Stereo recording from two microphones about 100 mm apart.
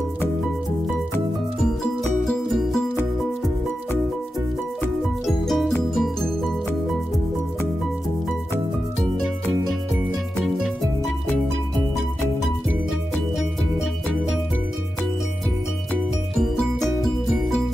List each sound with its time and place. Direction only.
2.2 s music: 5° left (ahead or behind)
5.2 s music: centre (ahead or behind)